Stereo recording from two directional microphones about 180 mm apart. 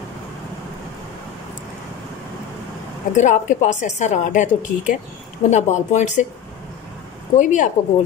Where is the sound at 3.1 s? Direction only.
40° left (ahead or behind).